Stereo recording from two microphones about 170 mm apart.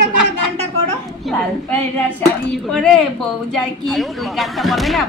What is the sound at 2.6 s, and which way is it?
Speech, 5° left (ahead or behind).